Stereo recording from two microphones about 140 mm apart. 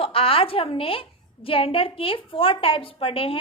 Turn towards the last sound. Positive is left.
turn(degrees=40)  # may be behind; listen again after turning